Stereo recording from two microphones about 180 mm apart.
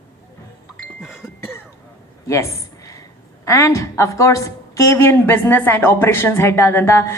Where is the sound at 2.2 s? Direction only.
15° left (ahead or behind).